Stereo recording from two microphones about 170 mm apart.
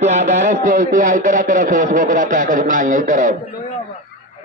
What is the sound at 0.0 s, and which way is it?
Speech, 45° right (ahead or behind).